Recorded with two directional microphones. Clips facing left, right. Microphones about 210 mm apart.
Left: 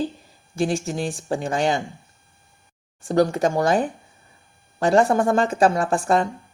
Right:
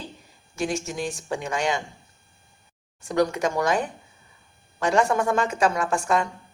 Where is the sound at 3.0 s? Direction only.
30° left (ahead or behind).